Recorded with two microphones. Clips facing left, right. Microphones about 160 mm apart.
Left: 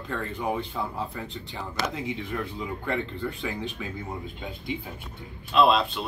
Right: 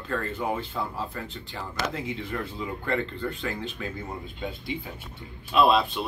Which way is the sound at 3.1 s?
10° left (ahead or behind).